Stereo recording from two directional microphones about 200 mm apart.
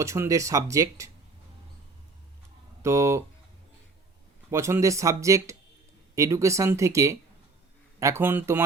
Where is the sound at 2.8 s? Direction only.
15° right (ahead or behind).